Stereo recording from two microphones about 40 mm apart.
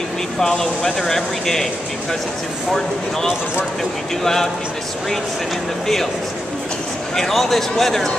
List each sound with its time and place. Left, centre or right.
0.4 s speech: centre
2.7 s speech: centre
7.2 s speech: centre